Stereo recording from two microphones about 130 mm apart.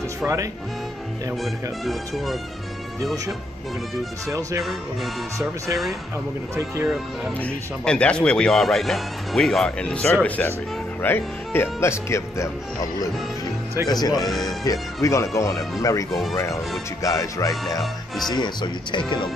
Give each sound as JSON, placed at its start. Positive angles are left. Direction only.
{"t": 0.2, "sound": "speech", "side_deg": -25}
{"t": 1.4, "sound": "speech", "side_deg": 0}
{"t": 4.3, "sound": "speech", "side_deg": -25}
{"t": 4.6, "sound": "speech", "side_deg": 0}
{"t": 7.3, "sound": "speech", "side_deg": 10}
{"t": 13.8, "sound": "speech", "side_deg": 30}
{"t": 16.1, "sound": "speech", "side_deg": 0}
{"t": 17.0, "sound": "speech", "side_deg": 25}
{"t": 17.6, "sound": "speech", "side_deg": 0}
{"t": 18.3, "sound": "speech", "side_deg": 35}